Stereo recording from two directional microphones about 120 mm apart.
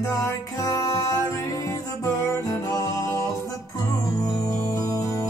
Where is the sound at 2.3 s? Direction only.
25° left (ahead or behind).